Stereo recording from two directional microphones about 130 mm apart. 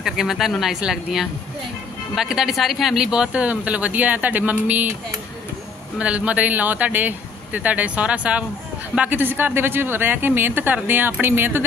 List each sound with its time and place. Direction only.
0.0 s speech: 5° right (ahead or behind)
5.9 s speech: 10° right (ahead or behind)